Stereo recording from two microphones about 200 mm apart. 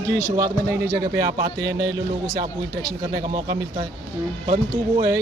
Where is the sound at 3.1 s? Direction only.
20° right (ahead or behind).